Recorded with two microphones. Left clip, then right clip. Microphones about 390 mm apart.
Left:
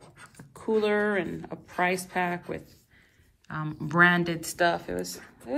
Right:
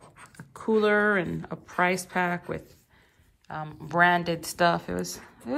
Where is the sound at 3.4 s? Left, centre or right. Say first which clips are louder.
Left 1 dB; centre.